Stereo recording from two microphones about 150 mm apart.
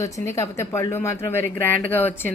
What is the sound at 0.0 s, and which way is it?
Speech, 20° left (ahead or behind).